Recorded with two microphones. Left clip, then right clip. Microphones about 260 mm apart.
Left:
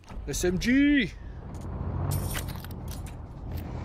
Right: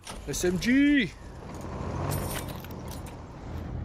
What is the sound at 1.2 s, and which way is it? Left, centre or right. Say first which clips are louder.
Vehicle: right 4 dB; right.